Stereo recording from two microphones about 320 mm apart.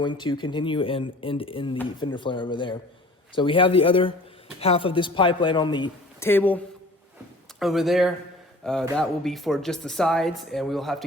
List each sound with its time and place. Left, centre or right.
0.0 s speech: centre
7.6 s speech: centre